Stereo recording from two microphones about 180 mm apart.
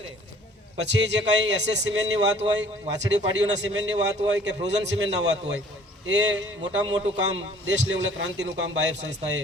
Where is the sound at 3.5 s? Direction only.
90° right.